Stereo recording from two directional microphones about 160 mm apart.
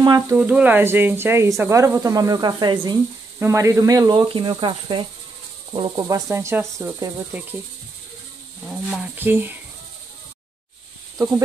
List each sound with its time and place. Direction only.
0.0 s speech: 25° right (ahead or behind)
0.4 s speech: 10° right (ahead or behind); by 3.0 s 30° right (ahead or behind)
3.3 s speech: 15° right (ahead or behind)
9.2 s speech: 15° right (ahead or behind)